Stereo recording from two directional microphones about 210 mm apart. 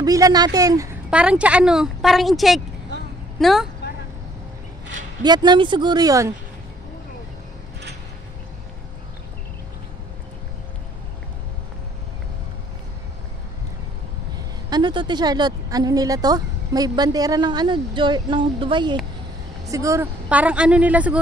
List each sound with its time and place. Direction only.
0.0 s a woman's voice: 15° right (ahead or behind)
1.1 s a woman's voice: 5° right (ahead or behind)
5.2 s a woman's voice: 20° right (ahead or behind)
14.3 s a woman's voice: 20° right (ahead or behind)